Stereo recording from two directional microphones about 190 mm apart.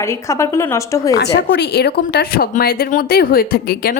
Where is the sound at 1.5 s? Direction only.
60° left (ahead or behind).